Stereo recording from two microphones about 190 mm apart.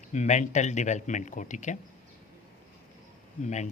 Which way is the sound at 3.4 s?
40° left (ahead or behind).